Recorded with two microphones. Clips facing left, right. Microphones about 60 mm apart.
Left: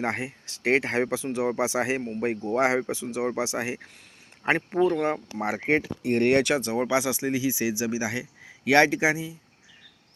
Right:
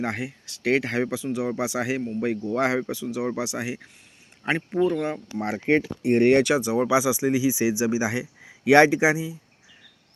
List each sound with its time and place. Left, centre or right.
0.0 s speech: left
5.4 s speech: centre
6.0 s speech: centre
6.2 s speech: centre